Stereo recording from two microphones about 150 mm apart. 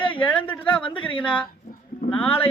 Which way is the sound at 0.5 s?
10° left (ahead or behind).